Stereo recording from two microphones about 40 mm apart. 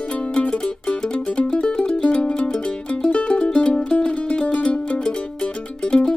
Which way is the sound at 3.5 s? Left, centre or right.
Centre.